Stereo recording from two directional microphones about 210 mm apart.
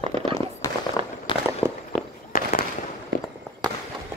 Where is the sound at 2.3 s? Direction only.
40° left (ahead or behind).